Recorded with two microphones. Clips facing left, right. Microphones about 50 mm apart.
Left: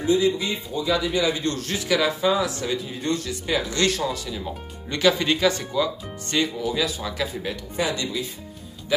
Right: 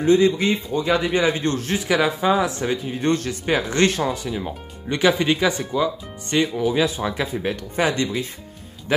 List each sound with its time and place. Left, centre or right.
0.0 s a man's voice: right; by 5.9 s centre
6.6 s a man's voice: right